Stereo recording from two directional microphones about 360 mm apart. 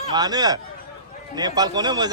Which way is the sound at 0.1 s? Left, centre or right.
Centre.